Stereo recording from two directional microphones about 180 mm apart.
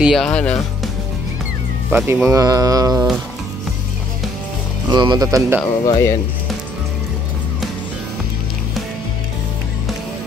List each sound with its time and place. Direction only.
0.0 s speech: centre (ahead or behind)
1.9 s speech: 10° right (ahead or behind)
2.2 s mantra: 20° right (ahead or behind)
4.9 s mantra: 25° right (ahead or behind)
5.9 s speech: 15° left (ahead or behind)